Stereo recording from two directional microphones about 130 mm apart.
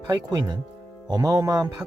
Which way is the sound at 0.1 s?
30° right (ahead or behind).